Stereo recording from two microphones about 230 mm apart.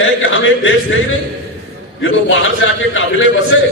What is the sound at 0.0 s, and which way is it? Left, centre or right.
Speech, left.